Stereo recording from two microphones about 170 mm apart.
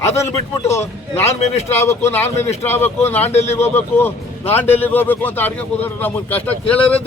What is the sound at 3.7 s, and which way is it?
A man's voice, 10° left (ahead or behind).